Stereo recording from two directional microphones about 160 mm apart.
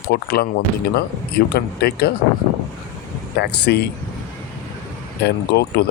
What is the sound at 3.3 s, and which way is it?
Speech, 90° left.